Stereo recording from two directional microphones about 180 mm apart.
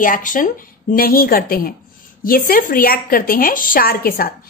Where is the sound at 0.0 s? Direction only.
50° left (ahead or behind).